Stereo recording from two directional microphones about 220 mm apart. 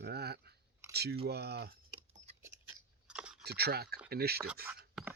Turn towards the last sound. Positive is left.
turn(degrees=-5)  # may be behind; listen again after turning